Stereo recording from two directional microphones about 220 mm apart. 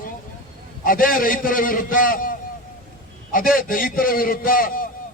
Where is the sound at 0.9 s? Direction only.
40° left (ahead or behind).